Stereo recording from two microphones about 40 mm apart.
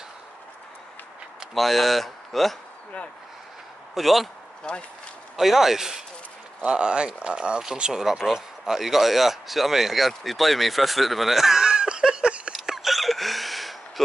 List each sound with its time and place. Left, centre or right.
1.5 s speech: centre
3.9 s speech: centre
4.7 s speech: centre
5.3 s a man's voice: centre
6.6 s speech: right; by 11.6 s centre
11.6 s a sound: centre
12.6 s hiccup: centre